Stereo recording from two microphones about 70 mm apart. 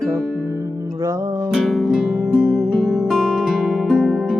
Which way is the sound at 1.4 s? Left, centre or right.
Centre.